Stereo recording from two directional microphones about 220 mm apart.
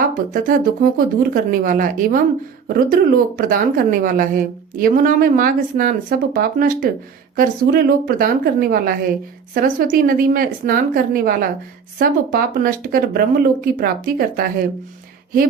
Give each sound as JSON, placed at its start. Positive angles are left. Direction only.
{"t": 0.1, "sound": "a woman's voice", "side_deg": -40}